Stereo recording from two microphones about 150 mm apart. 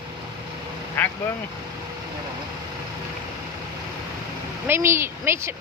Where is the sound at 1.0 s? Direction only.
10° left (ahead or behind).